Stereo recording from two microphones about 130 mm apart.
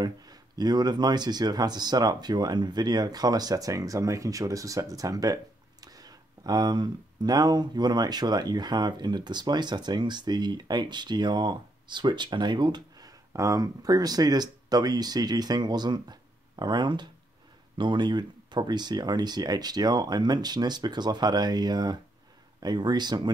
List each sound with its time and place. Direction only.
0.0 s speech: 30° right (ahead or behind)